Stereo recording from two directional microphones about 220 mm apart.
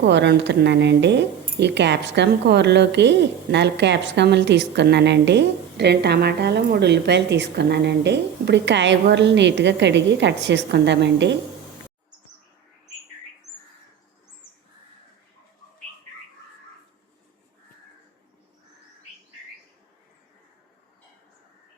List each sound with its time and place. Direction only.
0.0 s speech: 50° right (ahead or behind)